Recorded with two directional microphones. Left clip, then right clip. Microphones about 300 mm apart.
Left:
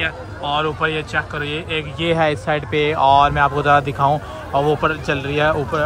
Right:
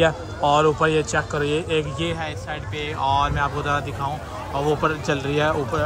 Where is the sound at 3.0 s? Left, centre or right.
Centre.